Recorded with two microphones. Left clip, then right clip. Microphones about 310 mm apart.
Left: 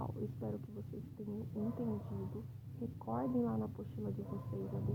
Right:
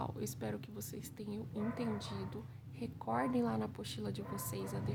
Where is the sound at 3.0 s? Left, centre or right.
Right.